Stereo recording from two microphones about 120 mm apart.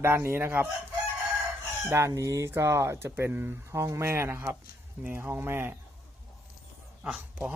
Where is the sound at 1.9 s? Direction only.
25° right (ahead or behind).